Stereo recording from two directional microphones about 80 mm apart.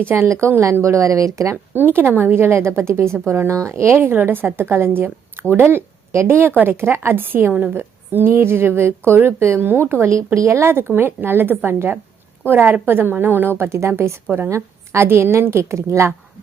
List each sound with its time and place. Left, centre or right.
0.0 s a woman's voice: right
1.7 s a woman's voice: right
13.6 s a woman's voice: right
14.3 s a woman's voice: right
14.5 s a woman's voice: right